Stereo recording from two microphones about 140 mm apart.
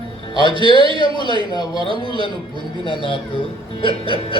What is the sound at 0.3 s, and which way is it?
Speech, 30° left (ahead or behind).